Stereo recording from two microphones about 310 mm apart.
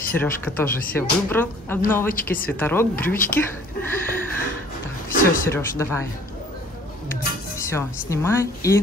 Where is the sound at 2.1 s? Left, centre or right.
Left.